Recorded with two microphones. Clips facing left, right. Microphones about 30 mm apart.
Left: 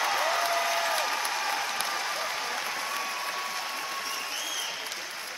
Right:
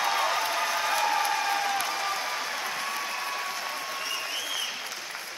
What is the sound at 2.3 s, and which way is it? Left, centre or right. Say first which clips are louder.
Applause: right 1 dB; centre.